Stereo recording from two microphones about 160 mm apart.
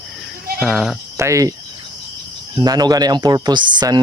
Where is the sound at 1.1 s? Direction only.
20° right (ahead or behind).